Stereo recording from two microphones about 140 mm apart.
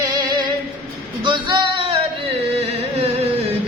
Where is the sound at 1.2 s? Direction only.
35° right (ahead or behind).